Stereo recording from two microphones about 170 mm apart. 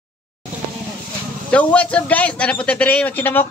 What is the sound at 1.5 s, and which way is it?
A man's voice, 5° left (ahead or behind).